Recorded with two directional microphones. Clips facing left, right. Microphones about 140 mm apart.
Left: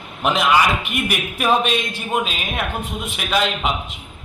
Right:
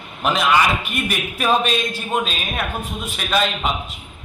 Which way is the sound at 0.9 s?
15° left (ahead or behind).